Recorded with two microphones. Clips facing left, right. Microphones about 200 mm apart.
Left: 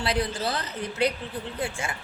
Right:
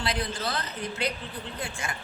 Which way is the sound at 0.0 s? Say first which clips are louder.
Left 4 dB; 30° left (ahead or behind).